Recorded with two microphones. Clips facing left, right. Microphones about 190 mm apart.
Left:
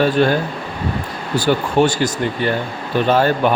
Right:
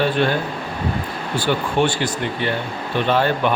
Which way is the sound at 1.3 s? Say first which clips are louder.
Left 4 dB; 40° left (ahead or behind).